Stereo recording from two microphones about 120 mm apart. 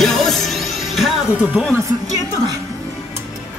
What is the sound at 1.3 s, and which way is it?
Speech, 10° right (ahead or behind).